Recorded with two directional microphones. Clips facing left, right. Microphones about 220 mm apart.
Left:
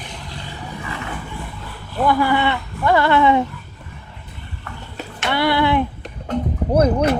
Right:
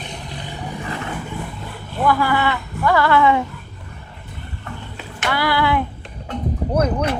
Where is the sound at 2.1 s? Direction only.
25° left (ahead or behind).